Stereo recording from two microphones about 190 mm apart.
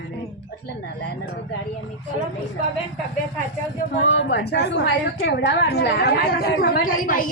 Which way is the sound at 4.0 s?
75° left (ahead or behind).